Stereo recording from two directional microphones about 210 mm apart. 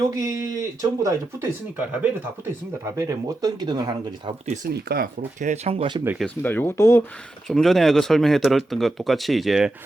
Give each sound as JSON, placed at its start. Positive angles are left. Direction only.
{"t": 0.0, "sound": "speech", "side_deg": -15}
{"t": 2.8, "sound": "speech", "side_deg": -15}
{"t": 4.6, "sound": "speech", "side_deg": -45}
{"t": 6.2, "sound": "speech", "side_deg": 10}
{"t": 7.4, "sound": "speech", "side_deg": 0}